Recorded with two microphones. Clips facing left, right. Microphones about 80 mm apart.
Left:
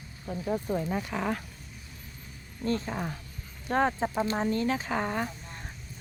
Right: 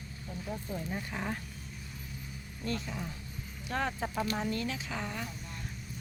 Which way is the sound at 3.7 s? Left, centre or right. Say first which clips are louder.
Left 8 dB; left.